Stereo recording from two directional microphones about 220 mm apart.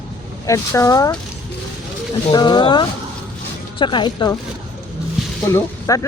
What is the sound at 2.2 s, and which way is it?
Speech, 20° left (ahead or behind).